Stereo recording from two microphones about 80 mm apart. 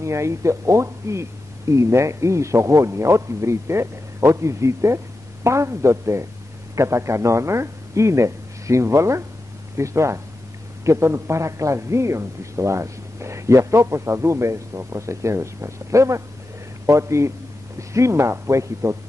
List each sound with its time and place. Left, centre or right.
0.0 s a man's voice: right